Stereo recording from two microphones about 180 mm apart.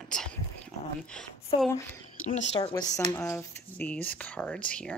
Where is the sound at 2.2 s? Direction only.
35° left (ahead or behind).